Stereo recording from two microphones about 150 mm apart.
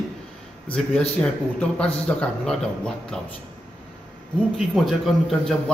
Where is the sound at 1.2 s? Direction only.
5° left (ahead or behind).